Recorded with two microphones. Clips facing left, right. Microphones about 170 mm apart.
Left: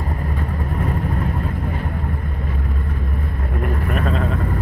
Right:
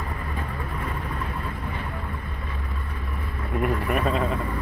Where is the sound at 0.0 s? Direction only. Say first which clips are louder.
Left 6 dB; 40° left (ahead or behind).